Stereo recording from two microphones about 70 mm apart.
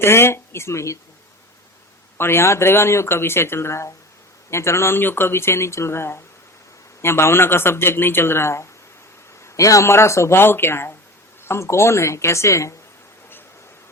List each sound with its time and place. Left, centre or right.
0.0 s speech: left
2.1 s speech: left
9.4 s a woman's voice: left